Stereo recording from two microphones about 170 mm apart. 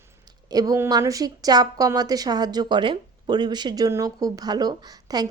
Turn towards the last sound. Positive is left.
turn(degrees=-25)  # may be behind; listen again after turning